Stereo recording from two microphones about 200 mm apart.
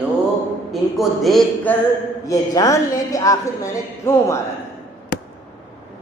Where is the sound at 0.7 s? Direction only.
Centre (ahead or behind).